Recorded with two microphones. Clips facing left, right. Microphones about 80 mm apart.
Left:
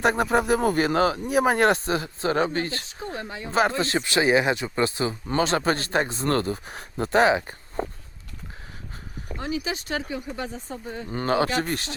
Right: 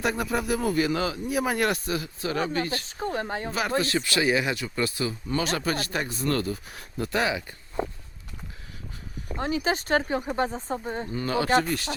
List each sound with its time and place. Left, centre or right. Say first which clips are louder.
0.0 s speech: left 5 dB; left
3.0 s speech: right 5 dB; right
3.8 s speech: left 2 dB; left
9.4 s speech: right 3 dB; right
11.1 s speech: left 5 dB; left